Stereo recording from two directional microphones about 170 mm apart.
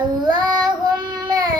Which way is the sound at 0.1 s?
25° right (ahead or behind).